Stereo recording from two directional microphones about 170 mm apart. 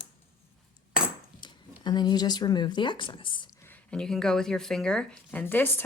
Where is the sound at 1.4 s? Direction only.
25° left (ahead or behind).